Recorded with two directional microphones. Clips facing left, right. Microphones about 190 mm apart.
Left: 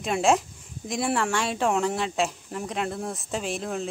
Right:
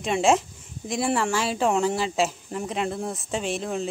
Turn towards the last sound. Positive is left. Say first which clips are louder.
# right 2 dB
turn(degrees=0)  # may be behind; listen again after turning